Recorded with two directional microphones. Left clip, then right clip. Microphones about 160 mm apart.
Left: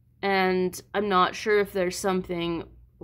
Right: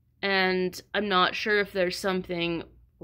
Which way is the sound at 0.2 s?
20° right (ahead or behind).